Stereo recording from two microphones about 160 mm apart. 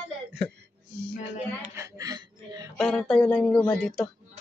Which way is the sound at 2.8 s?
Centre (ahead or behind).